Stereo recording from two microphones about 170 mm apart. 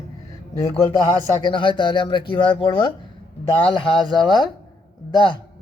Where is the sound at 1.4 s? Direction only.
30° left (ahead or behind).